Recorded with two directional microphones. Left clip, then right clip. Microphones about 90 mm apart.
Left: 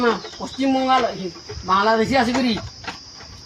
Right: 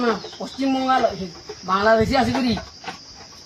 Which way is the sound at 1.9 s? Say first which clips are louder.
Left 1 dB; 30° right (ahead or behind).